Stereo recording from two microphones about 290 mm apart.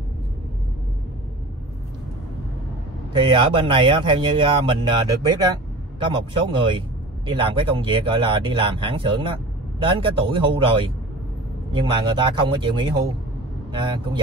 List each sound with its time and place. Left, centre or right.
3.1 s speech: centre